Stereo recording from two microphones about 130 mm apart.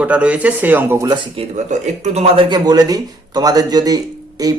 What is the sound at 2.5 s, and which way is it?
Speech, 35° right (ahead or behind).